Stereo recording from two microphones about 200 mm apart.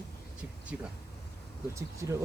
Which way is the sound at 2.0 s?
15° right (ahead or behind).